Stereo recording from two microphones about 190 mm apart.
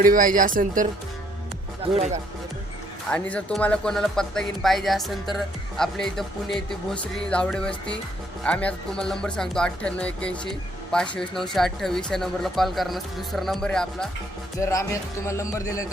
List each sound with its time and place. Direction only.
0.0 s speech: 45° right (ahead or behind)
3.1 s speech: 5° left (ahead or behind)
14.6 s speech: 15° left (ahead or behind)